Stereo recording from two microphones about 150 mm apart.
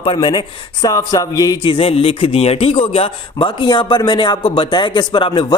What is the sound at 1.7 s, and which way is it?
A man's voice, 40° left (ahead or behind).